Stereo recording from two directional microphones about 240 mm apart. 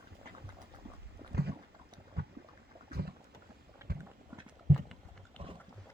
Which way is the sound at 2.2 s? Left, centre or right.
Right.